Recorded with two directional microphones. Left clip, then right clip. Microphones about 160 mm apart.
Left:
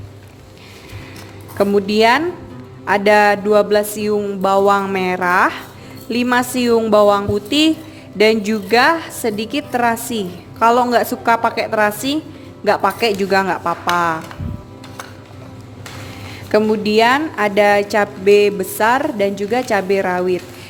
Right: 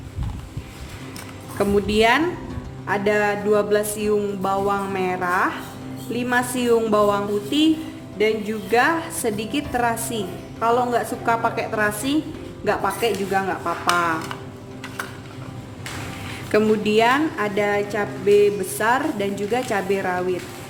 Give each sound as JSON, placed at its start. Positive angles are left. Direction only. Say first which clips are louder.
{"t": 1.5, "sound": "speech", "louder": "left 5 dB", "side_deg": 45}
{"t": 4.4, "sound": "speech", "louder": "left 12 dB", "side_deg": 60}
{"t": 8.2, "sound": "speech", "louder": "left 7 dB", "side_deg": 90}
{"t": 8.7, "sound": "speech", "louder": "left 5 dB", "side_deg": 50}
{"t": 13.9, "sound": "speech", "louder": "left 4 dB", "side_deg": 40}
{"t": 16.5, "sound": "speech", "louder": "left 4 dB", "side_deg": 40}